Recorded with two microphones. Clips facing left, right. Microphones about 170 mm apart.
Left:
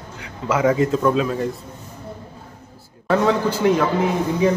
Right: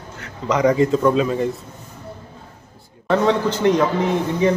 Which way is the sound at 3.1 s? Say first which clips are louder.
Right 1 dB; 5° left (ahead or behind).